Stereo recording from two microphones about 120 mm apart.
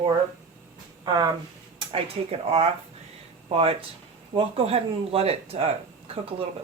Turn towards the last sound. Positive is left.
turn(degrees=-55)  # may be behind; listen again after turning